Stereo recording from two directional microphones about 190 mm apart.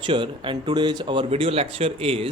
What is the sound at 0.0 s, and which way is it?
Speech, 25° right (ahead or behind).